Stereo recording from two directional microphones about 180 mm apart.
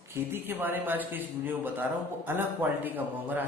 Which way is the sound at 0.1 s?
10° right (ahead or behind).